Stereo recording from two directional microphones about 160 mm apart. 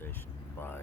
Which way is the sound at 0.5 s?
15° left (ahead or behind).